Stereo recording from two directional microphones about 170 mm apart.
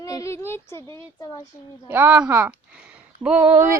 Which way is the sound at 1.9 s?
10° right (ahead or behind).